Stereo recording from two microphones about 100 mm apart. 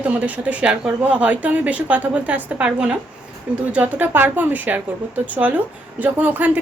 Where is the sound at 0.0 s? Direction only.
15° right (ahead or behind).